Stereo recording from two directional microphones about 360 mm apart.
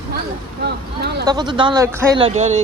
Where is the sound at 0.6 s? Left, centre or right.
Right.